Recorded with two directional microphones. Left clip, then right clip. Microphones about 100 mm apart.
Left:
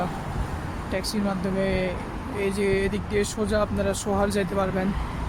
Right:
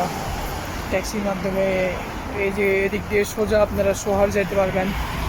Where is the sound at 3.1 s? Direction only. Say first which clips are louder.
Right 5 dB; 15° left (ahead or behind).